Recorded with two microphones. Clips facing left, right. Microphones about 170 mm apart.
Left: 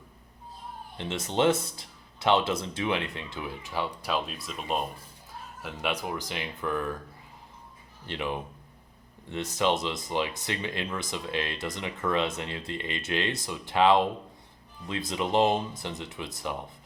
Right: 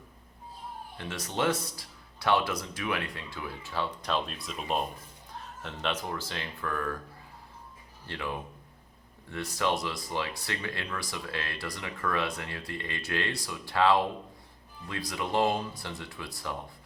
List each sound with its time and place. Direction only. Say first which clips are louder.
0.9 s speech: left 5 dB; 25° left (ahead or behind)
8.0 s speech: left 3 dB; 20° left (ahead or behind)